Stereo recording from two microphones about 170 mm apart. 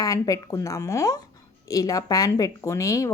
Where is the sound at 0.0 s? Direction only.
20° left (ahead or behind).